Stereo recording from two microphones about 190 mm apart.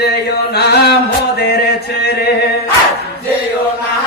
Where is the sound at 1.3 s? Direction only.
60° left (ahead or behind).